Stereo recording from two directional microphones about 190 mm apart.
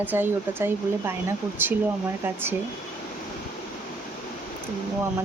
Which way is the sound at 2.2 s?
10° right (ahead or behind).